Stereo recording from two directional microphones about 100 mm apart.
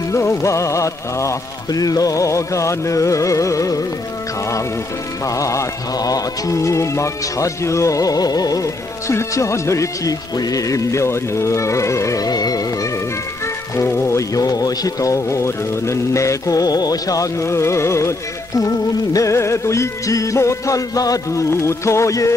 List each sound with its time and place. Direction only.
0.1 s music: 30° left (ahead or behind)
5.2 s music: 35° left (ahead or behind)
13.7 s music: 25° left (ahead or behind)
19.1 s music: 30° left (ahead or behind)